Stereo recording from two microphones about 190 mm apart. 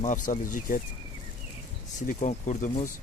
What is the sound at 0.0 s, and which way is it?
Speech, 40° left (ahead or behind).